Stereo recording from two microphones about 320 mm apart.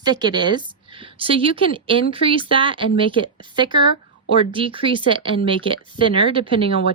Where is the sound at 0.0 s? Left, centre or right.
Centre.